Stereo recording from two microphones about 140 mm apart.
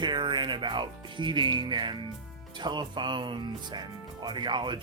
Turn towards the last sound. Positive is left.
turn(degrees=-35)  # may be behind; listen again after turning